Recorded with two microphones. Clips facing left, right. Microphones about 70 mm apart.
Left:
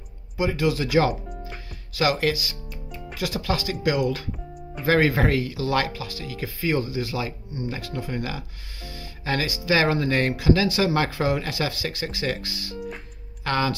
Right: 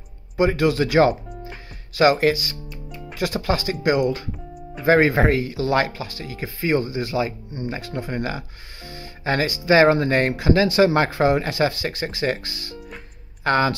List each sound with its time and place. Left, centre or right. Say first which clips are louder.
0.4 s speech: right 5 dB; right
2.7 s music: right 1 dB; centre
3.2 s speech: right 4 dB; right